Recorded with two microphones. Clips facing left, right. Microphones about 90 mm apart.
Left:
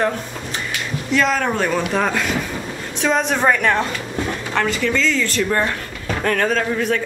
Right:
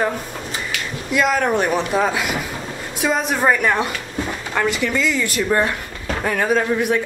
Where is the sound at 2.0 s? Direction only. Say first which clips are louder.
Even; 5° right (ahead or behind).